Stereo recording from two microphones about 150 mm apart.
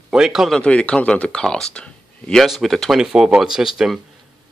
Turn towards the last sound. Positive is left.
turn(degrees=-5)  # may be behind; listen again after turning